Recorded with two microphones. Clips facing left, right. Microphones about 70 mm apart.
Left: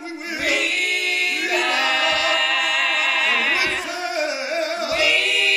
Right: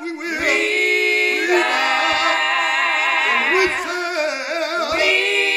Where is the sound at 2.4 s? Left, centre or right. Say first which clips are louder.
Right 3 dB; right.